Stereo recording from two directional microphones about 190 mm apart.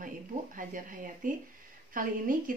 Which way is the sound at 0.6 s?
45° right (ahead or behind).